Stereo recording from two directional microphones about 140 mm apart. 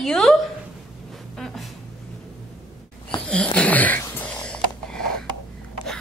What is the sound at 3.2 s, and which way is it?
Wheeze, 5° left (ahead or behind).